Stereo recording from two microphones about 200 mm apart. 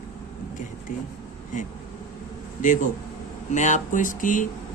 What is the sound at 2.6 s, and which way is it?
Speech, 40° left (ahead or behind).